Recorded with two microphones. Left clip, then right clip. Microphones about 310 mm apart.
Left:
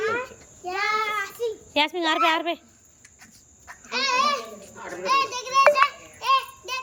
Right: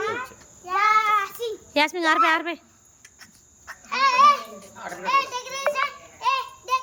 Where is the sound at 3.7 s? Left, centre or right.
Centre.